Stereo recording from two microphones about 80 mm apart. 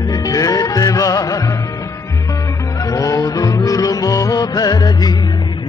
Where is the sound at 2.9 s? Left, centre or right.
Left.